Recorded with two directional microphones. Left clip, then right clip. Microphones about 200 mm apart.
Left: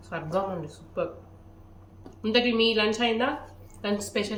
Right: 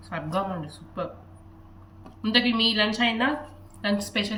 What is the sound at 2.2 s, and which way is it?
Speech, 20° left (ahead or behind).